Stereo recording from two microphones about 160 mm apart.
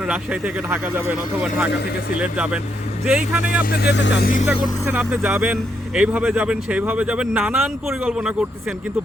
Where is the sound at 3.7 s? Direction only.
85° left.